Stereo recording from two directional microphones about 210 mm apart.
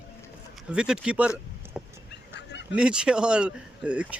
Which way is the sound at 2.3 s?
55° left (ahead or behind).